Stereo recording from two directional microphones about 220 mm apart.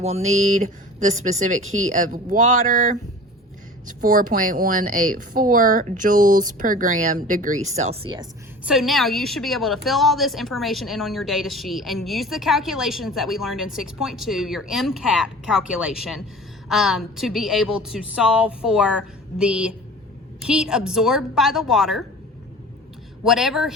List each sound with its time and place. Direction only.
0.0 s speech: 30° right (ahead or behind)
8.6 s a woman's voice: centre (ahead or behind)
23.2 s a woman's voice: centre (ahead or behind)